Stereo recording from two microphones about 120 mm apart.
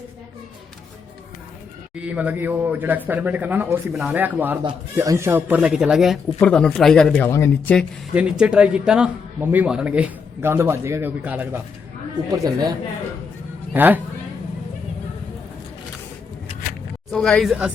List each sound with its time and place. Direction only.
2.0 s a man's voice: 10° right (ahead or behind)
5.5 s a man's voice: 10° right (ahead or behind)
6.4 s speech: 10° left (ahead or behind)
7.3 s speech: 20° left (ahead or behind)
8.1 s a man's voice: 10° right (ahead or behind)
12.3 s a woman's voice: 30° right (ahead or behind)
13.7 s a man's voice: 15° right (ahead or behind)
17.1 s speech: 5° left (ahead or behind)